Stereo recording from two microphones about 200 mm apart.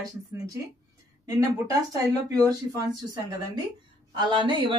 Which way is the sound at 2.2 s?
15° right (ahead or behind).